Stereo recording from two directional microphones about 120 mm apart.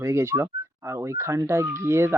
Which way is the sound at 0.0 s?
20° right (ahead or behind).